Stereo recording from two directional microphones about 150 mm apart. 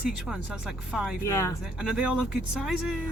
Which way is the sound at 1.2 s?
20° left (ahead or behind).